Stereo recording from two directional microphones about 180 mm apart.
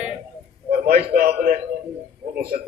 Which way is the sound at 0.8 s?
60° right (ahead or behind).